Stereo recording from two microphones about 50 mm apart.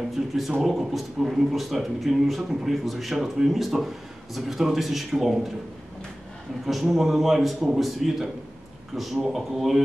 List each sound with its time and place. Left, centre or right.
0.1 s speech: centre
6.6 s speech: centre